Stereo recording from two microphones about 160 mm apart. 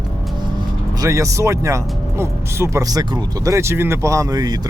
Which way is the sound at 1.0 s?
20° right (ahead or behind).